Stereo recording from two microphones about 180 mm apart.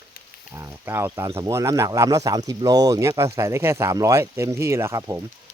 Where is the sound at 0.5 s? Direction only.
15° right (ahead or behind).